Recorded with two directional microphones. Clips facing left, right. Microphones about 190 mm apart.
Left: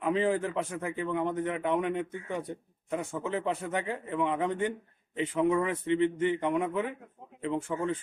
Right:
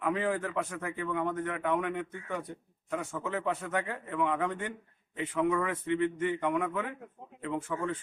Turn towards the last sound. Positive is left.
turn(degrees=20)  # may be behind; listen again after turning